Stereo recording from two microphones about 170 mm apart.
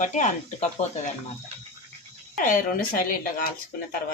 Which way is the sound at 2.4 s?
55° left (ahead or behind).